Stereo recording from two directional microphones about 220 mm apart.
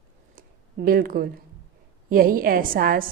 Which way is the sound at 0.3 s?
40° right (ahead or behind).